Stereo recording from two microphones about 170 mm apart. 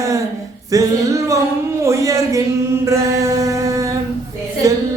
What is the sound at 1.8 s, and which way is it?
Chant, 15° right (ahead or behind).